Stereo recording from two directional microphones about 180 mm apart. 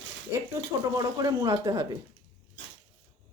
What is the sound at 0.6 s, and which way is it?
Speech, 20° right (ahead or behind).